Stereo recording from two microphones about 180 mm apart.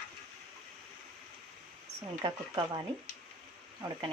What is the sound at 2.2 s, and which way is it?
Speech, 25° right (ahead or behind).